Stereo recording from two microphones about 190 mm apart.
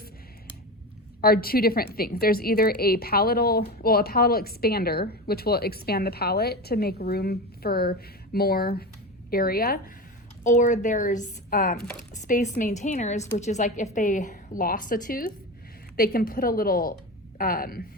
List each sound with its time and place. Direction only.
1.2 s a woman's voice: 50° left (ahead or behind)